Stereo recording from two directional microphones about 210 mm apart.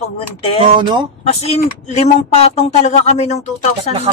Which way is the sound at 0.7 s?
20° right (ahead or behind).